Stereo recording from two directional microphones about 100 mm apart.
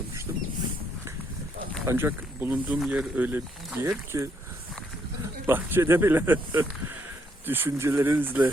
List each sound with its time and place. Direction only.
0.3 s vehicle: 25° right (ahead or behind)
1.9 s speech: 20° right (ahead or behind)
3.8 s speech: 30° right (ahead or behind)
5.5 s speech: 20° right (ahead or behind)